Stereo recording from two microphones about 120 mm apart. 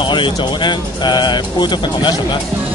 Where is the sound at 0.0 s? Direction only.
40° left (ahead or behind).